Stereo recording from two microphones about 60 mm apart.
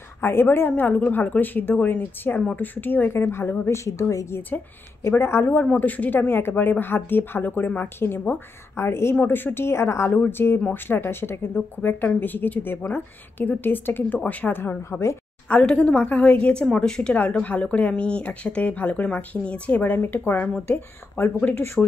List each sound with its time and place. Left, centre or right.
0.2 s a woman's voice: left
3.6 s a woman's voice: left
5.1 s a woman's voice: left
9.1 s a woman's voice: left
10.1 s a woman's voice: left
14.6 s a woman's voice: left
15.4 s speech: left
17.1 s speech: left
21.8 s speech: centre